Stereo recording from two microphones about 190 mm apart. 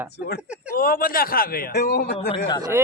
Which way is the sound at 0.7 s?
50° left (ahead or behind).